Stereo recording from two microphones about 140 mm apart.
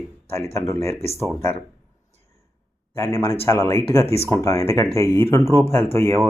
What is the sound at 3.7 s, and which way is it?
Speech, 20° left (ahead or behind).